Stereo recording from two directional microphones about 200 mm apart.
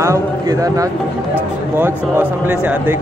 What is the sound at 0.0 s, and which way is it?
A man's voice, 15° right (ahead or behind).